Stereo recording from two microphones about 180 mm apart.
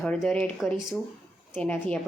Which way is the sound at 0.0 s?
5° left (ahead or behind).